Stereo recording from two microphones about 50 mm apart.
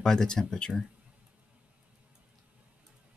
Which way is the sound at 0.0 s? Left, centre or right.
Centre.